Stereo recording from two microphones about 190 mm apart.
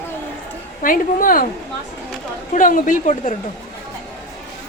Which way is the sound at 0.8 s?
45° left (ahead or behind).